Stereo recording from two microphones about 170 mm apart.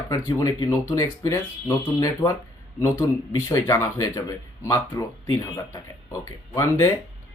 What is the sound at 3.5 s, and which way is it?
Speech, 15° left (ahead or behind).